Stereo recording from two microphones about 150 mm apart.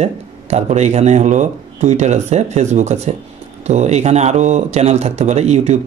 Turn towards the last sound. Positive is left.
turn(degrees=-50)  # may be behind; listen again after turning